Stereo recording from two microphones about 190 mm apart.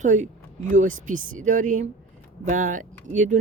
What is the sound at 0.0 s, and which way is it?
Speech, 40° right (ahead or behind).